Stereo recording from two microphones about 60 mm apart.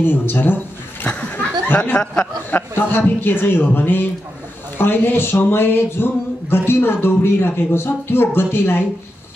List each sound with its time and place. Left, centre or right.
0.0 s speech: left
1.0 s a sound: left
2.5 s speech: left